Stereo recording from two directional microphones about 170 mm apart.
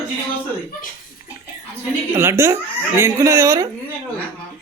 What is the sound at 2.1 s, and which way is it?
Speech, 15° right (ahead or behind).